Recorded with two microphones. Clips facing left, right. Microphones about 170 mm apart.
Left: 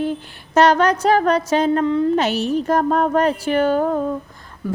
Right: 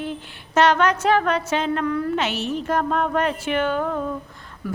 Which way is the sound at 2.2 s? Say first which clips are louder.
Left 6 dB; 40° left (ahead or behind).